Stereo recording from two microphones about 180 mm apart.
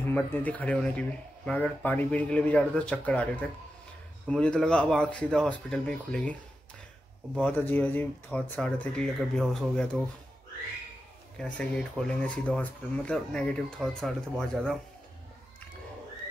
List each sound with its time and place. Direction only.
0.1 s speech: 10° left (ahead or behind)
7.4 s speech: 10° left (ahead or behind)
11.3 s speech: 5° left (ahead or behind)